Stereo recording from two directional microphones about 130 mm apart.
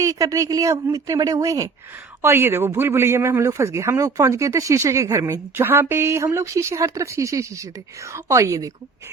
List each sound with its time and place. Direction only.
0.0 s a man's voice: 25° right (ahead or behind)